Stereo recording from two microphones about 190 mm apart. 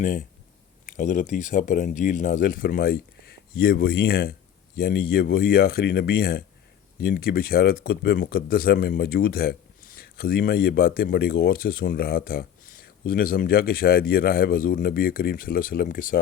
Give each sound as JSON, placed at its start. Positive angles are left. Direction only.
{"t": 0.0, "sound": "speech", "side_deg": 45}